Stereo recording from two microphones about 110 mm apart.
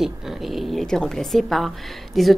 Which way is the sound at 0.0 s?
5° right (ahead or behind).